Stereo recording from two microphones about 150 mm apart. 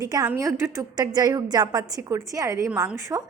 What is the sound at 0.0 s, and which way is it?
A woman's voice, 25° right (ahead or behind).